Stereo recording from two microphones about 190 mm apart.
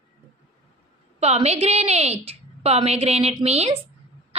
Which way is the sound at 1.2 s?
35° right (ahead or behind).